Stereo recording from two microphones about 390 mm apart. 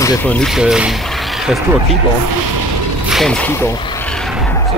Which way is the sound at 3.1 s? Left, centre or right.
Centre.